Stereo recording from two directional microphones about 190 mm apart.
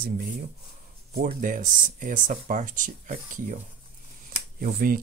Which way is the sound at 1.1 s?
45° right (ahead or behind).